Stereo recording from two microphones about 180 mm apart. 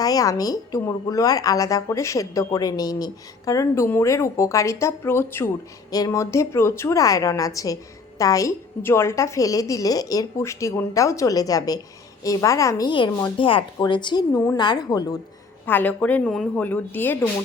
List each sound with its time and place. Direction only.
0.0 s a woman's voice: 20° left (ahead or behind)
15.6 s a woman's voice: 10° left (ahead or behind)